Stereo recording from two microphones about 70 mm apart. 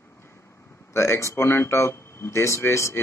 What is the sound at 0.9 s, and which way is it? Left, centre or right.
Speech, left.